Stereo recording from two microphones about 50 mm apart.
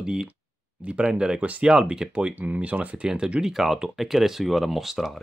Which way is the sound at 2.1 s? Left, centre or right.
Right.